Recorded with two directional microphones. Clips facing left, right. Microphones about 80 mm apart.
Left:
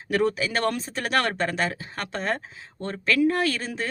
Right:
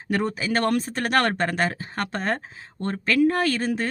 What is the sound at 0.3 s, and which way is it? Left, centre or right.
Speech, right.